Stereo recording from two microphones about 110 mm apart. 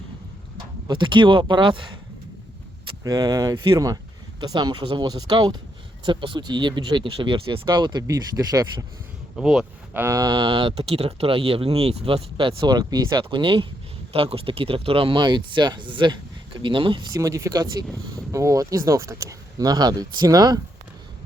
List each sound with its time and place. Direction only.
0.5 s speech: 45° right (ahead or behind)
3.0 s speech: 35° right (ahead or behind)
9.3 s speech: 5° right (ahead or behind)
9.9 s a sound: 20° right (ahead or behind)
10.2 s speech: 40° right (ahead or behind)
14.1 s speech: 60° right (ahead or behind)
17.2 s speech: 30° right (ahead or behind)